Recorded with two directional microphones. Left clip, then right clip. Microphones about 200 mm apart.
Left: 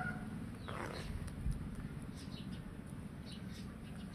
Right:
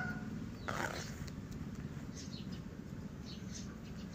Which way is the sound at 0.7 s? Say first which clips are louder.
Right 6 dB; 35° right (ahead or behind).